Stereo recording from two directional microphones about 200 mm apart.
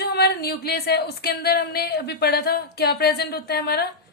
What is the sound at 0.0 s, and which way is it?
Speech, 55° left (ahead or behind).